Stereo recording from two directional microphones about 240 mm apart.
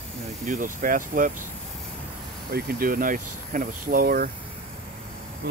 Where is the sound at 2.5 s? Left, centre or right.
Right.